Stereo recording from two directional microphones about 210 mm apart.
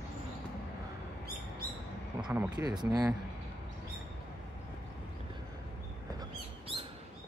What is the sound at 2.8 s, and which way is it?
Speech, 15° right (ahead or behind).